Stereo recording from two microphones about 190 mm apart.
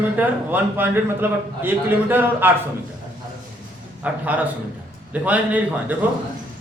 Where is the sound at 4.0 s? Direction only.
10° right (ahead or behind).